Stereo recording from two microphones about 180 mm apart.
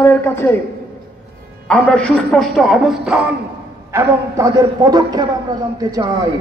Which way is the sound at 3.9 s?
15° right (ahead or behind).